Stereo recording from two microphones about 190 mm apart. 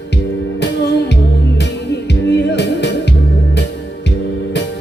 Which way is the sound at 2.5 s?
65° left (ahead or behind).